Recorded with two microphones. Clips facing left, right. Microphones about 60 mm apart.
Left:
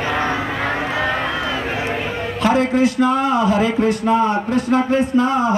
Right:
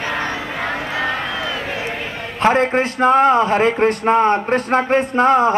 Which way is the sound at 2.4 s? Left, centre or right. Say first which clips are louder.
Right 1 dB; right.